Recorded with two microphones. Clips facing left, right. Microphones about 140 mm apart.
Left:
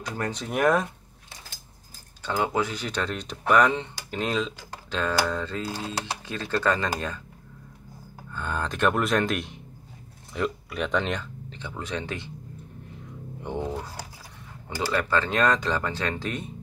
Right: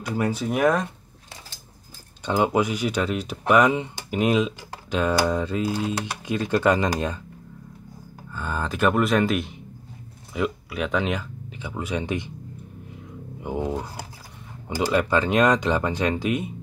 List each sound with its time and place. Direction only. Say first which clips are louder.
0.0 s speech: right 6 dB; 10° right (ahead or behind)
2.2 s speech: right 5 dB; 20° right (ahead or behind)
8.3 s speech: right 2 dB; 5° right (ahead or behind)
13.4 s speech: right 4 dB; 5° right (ahead or behind)